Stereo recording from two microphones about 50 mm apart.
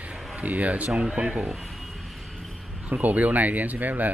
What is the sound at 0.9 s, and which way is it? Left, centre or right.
Speech, centre.